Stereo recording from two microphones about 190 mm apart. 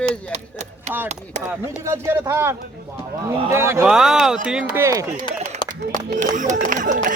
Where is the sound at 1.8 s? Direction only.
15° right (ahead or behind).